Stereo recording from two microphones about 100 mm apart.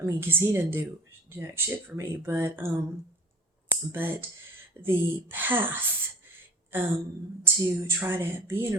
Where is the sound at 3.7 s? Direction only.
20° right (ahead or behind).